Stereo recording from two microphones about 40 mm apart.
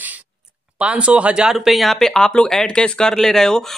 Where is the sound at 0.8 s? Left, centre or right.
Right.